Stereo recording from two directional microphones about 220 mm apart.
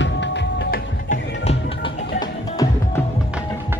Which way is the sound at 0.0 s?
55° left (ahead or behind).